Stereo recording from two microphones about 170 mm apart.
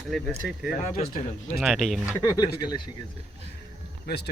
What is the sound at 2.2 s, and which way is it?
Speech, 25° left (ahead or behind).